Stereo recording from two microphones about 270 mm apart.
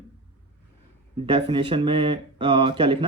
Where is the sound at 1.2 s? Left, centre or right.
Centre.